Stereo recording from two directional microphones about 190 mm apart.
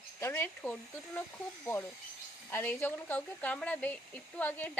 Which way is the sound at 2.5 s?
10° left (ahead or behind).